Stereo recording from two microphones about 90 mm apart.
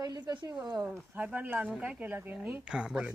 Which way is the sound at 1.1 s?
15° right (ahead or behind).